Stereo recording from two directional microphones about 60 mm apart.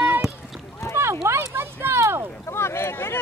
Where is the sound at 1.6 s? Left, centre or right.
Right.